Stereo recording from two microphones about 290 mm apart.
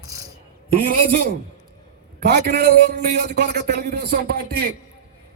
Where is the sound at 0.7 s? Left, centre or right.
Right.